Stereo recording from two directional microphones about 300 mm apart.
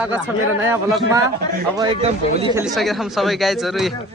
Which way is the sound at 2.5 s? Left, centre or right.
Centre.